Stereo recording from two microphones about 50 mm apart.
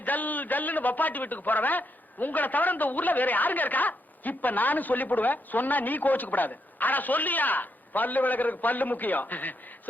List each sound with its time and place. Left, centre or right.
0.0 s a man's voice: left